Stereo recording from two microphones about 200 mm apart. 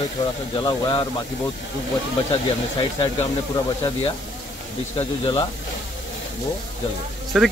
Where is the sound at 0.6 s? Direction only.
20° left (ahead or behind).